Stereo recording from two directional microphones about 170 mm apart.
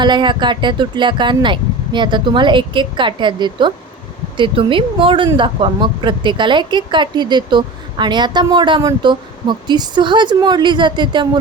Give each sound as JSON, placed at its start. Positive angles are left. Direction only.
{"t": 0.0, "sound": "speech", "side_deg": -25}